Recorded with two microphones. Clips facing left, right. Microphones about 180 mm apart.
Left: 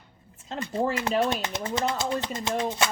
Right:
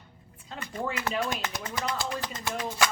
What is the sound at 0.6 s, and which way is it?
Speech, 30° left (ahead or behind).